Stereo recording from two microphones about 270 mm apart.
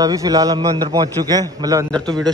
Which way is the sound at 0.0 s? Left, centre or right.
Centre.